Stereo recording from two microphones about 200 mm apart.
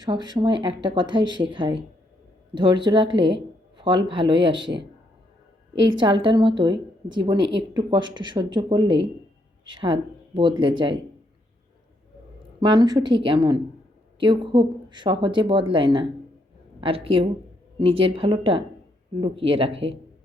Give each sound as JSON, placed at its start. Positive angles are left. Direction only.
{"t": 0.0, "sound": "speech", "side_deg": -20}
{"t": 3.8, "sound": "music", "side_deg": -25}
{"t": 4.1, "sound": "speech", "side_deg": -25}
{"t": 5.7, "sound": "speech", "side_deg": -20}
{"t": 12.5, "sound": "speech", "side_deg": -20}